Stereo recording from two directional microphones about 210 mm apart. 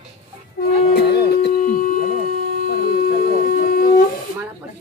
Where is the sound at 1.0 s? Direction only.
50° left (ahead or behind).